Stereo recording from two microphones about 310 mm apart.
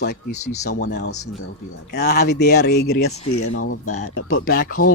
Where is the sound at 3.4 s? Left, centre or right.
Left.